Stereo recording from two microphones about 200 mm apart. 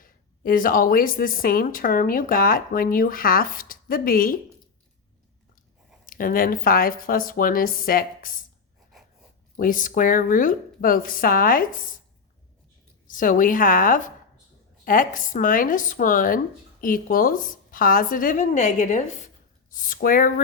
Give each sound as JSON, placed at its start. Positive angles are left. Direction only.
{"t": 0.0, "sound": "a woman's voice", "side_deg": 45}
{"t": 6.1, "sound": "a woman's voice", "side_deg": 45}
{"t": 9.6, "sound": "a woman's voice", "side_deg": 45}
{"t": 13.1, "sound": "a woman's voice", "side_deg": 40}